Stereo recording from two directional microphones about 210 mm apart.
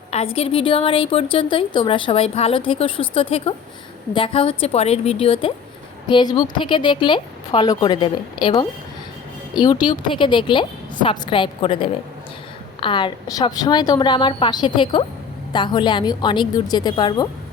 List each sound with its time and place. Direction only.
0.1 s a woman's voice: 30° left (ahead or behind)